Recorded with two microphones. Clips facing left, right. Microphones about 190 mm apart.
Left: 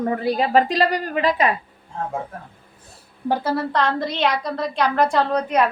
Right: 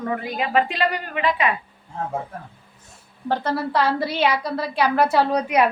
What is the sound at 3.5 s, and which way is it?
A woman's voice, 5° right (ahead or behind).